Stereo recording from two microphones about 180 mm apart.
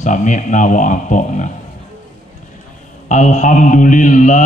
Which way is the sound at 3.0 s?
45° left (ahead or behind).